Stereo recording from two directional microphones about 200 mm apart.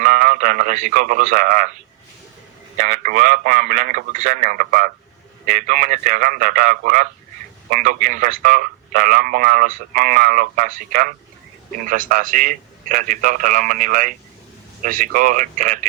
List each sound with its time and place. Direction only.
0.0 s speech: 40° right (ahead or behind)
2.7 s a man's voice: 40° right (ahead or behind)